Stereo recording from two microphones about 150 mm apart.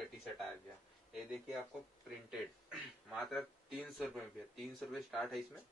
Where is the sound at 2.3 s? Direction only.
Centre (ahead or behind).